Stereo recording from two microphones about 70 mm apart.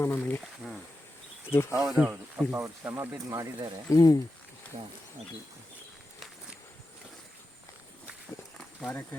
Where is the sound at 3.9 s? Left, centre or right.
Left.